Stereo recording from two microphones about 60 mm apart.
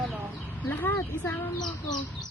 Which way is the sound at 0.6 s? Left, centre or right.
Left.